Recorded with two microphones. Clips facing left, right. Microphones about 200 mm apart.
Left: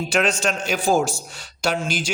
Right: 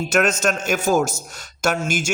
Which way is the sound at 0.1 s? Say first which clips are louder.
Right 3 dB; 45° right (ahead or behind).